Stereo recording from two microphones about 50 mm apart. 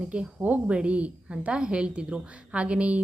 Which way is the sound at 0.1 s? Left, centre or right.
Right.